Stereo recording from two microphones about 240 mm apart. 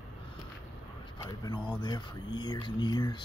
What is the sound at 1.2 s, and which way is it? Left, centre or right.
Speech, centre.